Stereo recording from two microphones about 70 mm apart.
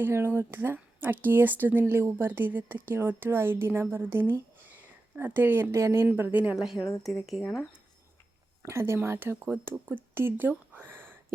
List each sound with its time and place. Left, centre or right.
0.0 s speech: right
4.6 s a sound: right
5.7 s speech: right
6.3 s a woman's voice: right
6.6 s speech: centre
8.6 s speech: right
10.8 s a sound: right